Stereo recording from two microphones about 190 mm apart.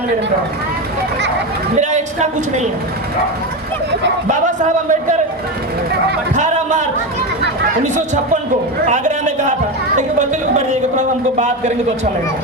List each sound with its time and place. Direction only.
1.8 s speech: 40° right (ahead or behind)
4.3 s speech: 40° right (ahead or behind)
6.3 s speech: 40° right (ahead or behind)
7.9 s speech: 40° right (ahead or behind)